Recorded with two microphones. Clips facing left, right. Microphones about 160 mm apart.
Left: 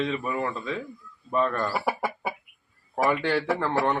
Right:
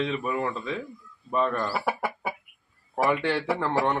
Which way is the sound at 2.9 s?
Centre (ahead or behind).